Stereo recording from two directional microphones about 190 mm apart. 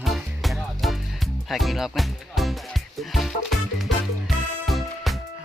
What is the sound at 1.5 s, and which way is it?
Speech, centre (ahead or behind).